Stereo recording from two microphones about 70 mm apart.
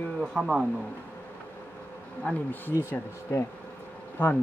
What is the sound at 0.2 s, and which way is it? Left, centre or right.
Speech, centre.